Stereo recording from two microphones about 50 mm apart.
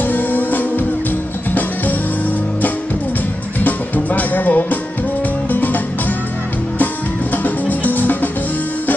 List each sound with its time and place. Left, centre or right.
0.0 s music: left
3.5 s music: left
7.4 s music: left